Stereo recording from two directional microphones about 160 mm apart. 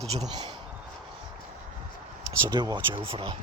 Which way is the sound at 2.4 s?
25° right (ahead or behind).